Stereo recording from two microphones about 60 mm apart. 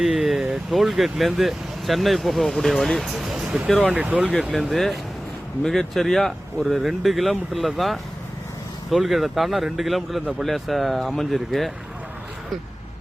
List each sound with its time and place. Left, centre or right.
0.0 s a sound: centre
0.7 s speech: centre
3.9 s speech: right
4.4 s speech: centre